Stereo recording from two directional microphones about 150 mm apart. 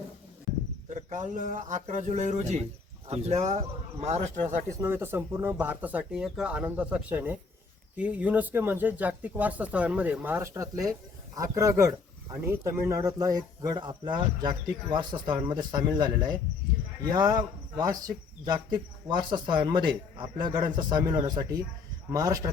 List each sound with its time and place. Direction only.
0.9 s speech: 55° right (ahead or behind)
4.8 s speech: 15° right (ahead or behind)